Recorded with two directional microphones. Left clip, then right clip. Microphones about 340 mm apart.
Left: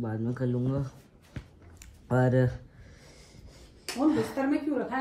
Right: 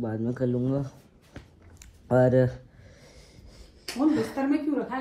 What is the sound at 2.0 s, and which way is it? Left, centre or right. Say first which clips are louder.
Speech: right 5 dB; centre.